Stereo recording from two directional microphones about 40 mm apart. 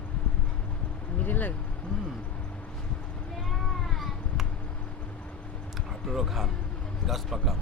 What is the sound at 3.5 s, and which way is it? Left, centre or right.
Cat, centre.